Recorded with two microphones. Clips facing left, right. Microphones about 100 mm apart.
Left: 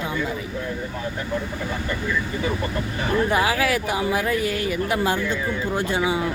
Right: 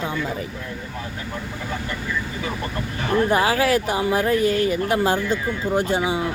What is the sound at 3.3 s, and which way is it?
Speech, 30° right (ahead or behind).